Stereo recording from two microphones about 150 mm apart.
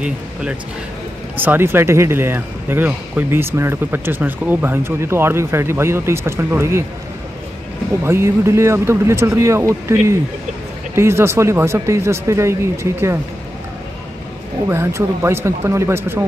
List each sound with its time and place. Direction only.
0.0 s speech: 5° right (ahead or behind)
8.0 s speech: 15° right (ahead or behind)
14.7 s speech: 15° right (ahead or behind)